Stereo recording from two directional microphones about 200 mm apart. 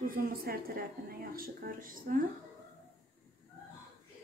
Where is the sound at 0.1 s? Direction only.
50° right (ahead or behind).